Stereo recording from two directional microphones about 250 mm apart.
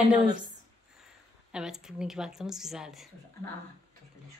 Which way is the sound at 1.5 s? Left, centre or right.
Centre.